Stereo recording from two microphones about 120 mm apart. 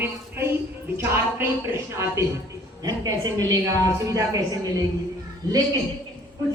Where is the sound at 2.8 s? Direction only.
30° right (ahead or behind).